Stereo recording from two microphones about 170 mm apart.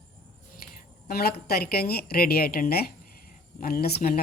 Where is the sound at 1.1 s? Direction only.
65° left (ahead or behind).